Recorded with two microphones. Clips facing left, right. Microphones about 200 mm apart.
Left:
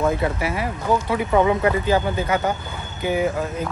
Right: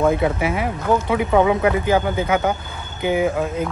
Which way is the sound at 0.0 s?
20° right (ahead or behind).